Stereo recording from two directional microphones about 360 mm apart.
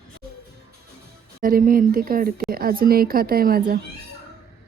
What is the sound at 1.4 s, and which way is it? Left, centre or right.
A woman's voice, right.